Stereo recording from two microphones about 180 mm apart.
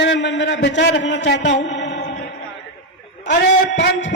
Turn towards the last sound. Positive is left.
turn(degrees=75)  # may be behind; listen again after turning